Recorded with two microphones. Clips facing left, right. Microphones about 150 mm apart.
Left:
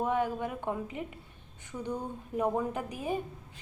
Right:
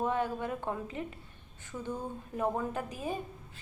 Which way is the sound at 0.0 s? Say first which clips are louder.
Left 2 dB; 15° left (ahead or behind).